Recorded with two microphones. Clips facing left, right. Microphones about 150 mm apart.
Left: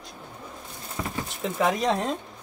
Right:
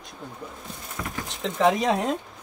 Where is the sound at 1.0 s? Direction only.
15° left (ahead or behind).